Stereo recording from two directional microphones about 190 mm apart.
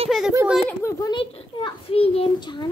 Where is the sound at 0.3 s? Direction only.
10° right (ahead or behind).